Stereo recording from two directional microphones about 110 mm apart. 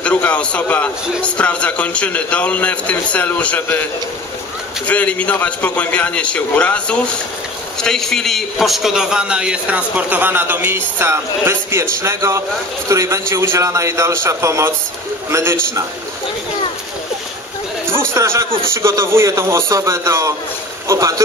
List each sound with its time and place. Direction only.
0.0 s a man's voice: 15° left (ahead or behind)
4.8 s a man's voice: 15° left (ahead or behind); by 15.8 s 25° right (ahead or behind)
18.1 s a man's voice: 25° right (ahead or behind)